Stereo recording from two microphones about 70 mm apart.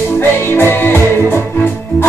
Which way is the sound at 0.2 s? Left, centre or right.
Left.